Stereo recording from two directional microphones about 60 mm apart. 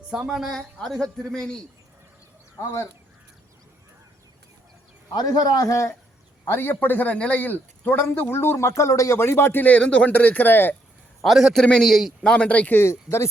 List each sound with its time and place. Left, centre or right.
0.1 s a woman's voice: centre
0.5 s speech: centre
5.2 s a man's voice: left
6.4 s speech: left
9.1 s speech: left
9.6 s speech: left
11.2 s a man's voice: centre
12.2 s speech: centre
12.9 s speech: left